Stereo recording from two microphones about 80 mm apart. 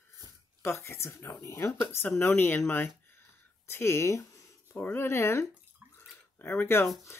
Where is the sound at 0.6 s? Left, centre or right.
Left.